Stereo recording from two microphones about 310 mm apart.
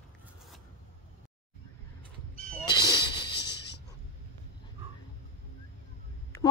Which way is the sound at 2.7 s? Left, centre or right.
Left.